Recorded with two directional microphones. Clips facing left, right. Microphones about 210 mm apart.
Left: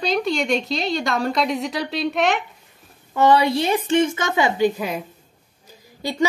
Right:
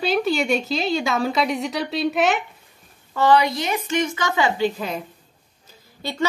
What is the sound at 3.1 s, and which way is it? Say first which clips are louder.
A woman's voice: left 1 dB; 20° left (ahead or behind).